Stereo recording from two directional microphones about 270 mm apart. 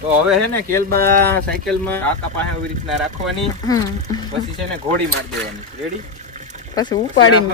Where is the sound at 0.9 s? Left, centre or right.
Right.